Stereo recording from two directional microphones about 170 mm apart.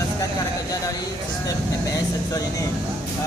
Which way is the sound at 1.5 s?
20° left (ahead or behind).